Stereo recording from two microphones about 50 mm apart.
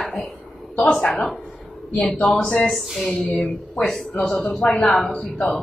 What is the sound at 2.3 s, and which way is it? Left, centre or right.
Speech, left.